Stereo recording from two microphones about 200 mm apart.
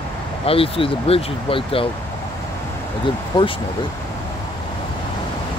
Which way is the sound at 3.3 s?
25° left (ahead or behind).